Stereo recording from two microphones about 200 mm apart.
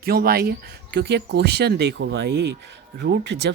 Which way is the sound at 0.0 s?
50° right (ahead or behind).